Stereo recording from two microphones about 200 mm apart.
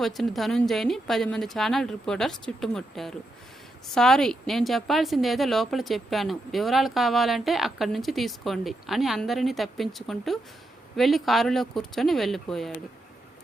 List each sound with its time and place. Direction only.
0.0 s speech: centre (ahead or behind)